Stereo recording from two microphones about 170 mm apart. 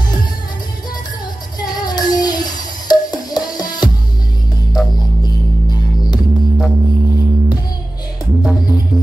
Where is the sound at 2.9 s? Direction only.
25° left (ahead or behind).